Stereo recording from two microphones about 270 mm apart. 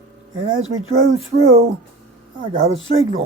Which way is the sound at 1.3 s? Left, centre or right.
Right.